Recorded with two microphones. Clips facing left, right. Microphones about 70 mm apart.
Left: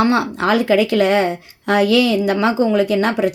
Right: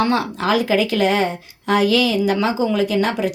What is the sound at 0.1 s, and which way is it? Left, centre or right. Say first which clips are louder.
A woman's voice: left 2 dB; left.